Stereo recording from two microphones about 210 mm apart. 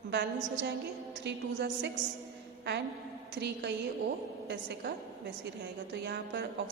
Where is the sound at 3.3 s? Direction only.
55° right (ahead or behind).